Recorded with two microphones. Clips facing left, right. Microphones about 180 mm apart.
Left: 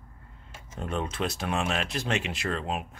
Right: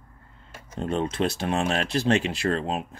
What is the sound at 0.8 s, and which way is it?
Speech, 30° right (ahead or behind).